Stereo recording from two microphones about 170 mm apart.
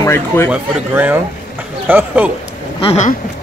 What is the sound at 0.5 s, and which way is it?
Speech, 10° right (ahead or behind).